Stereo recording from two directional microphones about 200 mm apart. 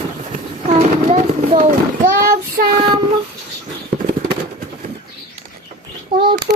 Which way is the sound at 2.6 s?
45° right (ahead or behind).